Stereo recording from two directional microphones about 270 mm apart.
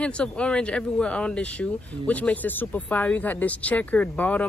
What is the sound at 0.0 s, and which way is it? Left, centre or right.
Speech, centre.